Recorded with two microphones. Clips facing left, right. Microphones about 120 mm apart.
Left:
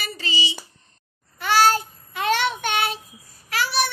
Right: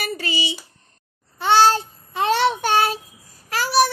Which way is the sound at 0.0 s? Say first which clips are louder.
Right 3 dB; 55° right (ahead or behind).